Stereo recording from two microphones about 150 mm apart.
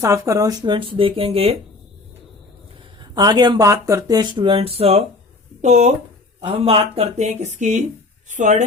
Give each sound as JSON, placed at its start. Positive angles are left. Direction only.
{"t": 0.0, "sound": "speech", "side_deg": -20}
{"t": 3.0, "sound": "speech", "side_deg": -30}
{"t": 6.5, "sound": "speech", "side_deg": -40}